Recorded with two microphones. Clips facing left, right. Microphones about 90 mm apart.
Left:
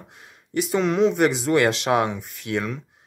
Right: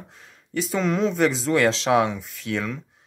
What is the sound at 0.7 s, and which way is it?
Speech, 5° left (ahead or behind).